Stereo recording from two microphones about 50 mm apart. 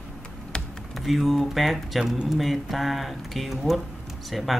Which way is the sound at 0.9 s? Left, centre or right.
Centre.